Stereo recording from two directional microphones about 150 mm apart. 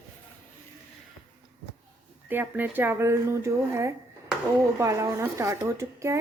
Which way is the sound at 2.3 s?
10° right (ahead or behind).